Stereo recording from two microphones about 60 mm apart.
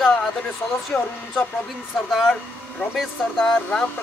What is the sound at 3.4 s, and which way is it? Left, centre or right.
Speech, centre.